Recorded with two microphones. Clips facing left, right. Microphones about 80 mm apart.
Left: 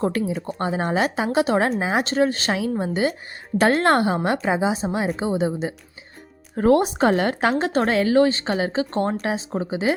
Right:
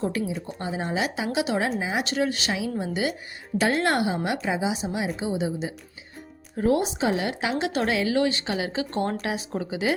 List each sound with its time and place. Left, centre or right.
0.0 s a woman's voice: left
2.0 s a woman's voice: left
6.6 s a woman's voice: left